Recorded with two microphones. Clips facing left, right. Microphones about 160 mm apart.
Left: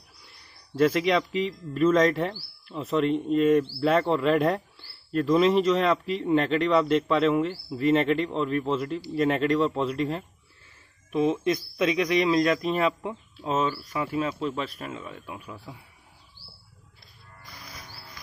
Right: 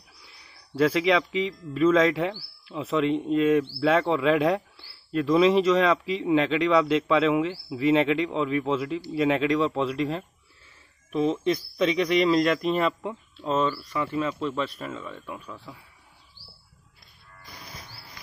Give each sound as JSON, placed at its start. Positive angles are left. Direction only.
{"t": 0.2, "sound": "speech", "side_deg": 0}
{"t": 13.9, "sound": "speech", "side_deg": 15}
{"t": 14.4, "sound": "speech", "side_deg": 0}